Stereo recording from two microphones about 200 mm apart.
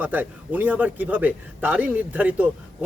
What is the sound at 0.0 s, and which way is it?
A man's voice, 10° right (ahead or behind).